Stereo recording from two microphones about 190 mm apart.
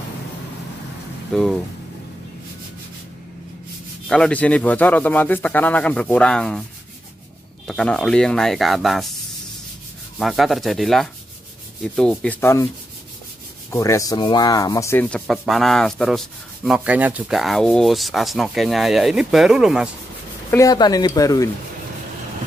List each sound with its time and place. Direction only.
1.3 s sanding: centre (ahead or behind)
4.1 s speech: 5° left (ahead or behind)
7.6 s sanding: 5° left (ahead or behind)
10.1 s sanding: centre (ahead or behind)
13.7 s sanding: 15° left (ahead or behind); by 19.9 s 5° right (ahead or behind)
20.5 s speech: 20° left (ahead or behind)